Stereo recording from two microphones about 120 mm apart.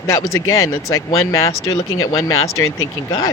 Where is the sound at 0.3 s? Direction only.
25° left (ahead or behind).